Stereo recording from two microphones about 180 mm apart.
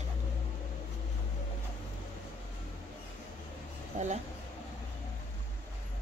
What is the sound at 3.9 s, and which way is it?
Speech, 45° right (ahead or behind).